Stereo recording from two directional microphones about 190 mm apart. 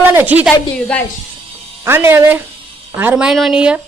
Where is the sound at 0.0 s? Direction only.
10° right (ahead or behind).